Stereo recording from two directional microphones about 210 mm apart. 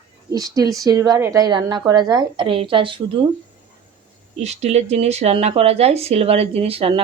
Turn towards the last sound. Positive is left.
turn(degrees=-25)  # may be behind; listen again after turning